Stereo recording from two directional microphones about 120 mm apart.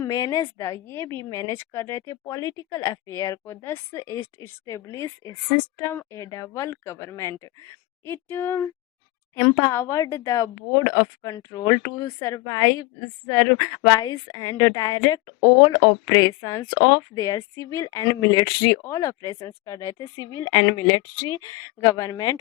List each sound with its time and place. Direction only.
0.0 s a woman's voice: 30° left (ahead or behind)